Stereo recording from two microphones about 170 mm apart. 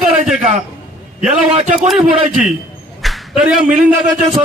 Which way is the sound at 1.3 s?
40° right (ahead or behind).